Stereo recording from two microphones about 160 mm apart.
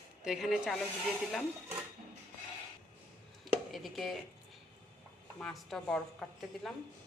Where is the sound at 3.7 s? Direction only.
Centre (ahead or behind).